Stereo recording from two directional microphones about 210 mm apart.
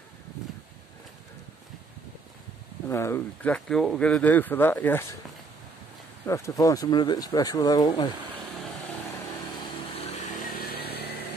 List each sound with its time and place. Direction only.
2.9 s speech: 10° left (ahead or behind)
6.2 s speech: 15° left (ahead or behind)
10.4 s vehicle: 45° left (ahead or behind)